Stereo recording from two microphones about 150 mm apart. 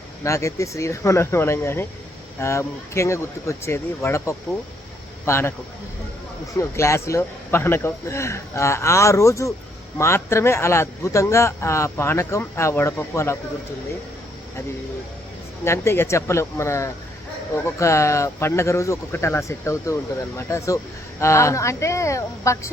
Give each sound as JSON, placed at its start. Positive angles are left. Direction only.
{"t": 0.3, "sound": "a man's voice", "side_deg": 20}
{"t": 6.6, "sound": "a man's voice", "side_deg": 20}
{"t": 15.6, "sound": "speech", "side_deg": 15}